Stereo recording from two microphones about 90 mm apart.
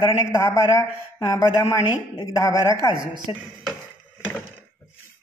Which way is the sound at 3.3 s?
90° left.